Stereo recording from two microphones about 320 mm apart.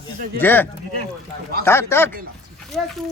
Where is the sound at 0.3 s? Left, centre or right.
Centre.